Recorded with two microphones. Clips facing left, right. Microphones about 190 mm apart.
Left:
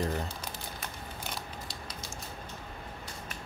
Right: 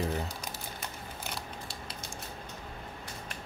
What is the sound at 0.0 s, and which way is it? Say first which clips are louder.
Speech: even; centre (ahead or behind).